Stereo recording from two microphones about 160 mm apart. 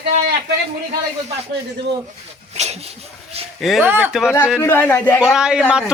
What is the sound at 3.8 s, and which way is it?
Speech, 15° right (ahead or behind).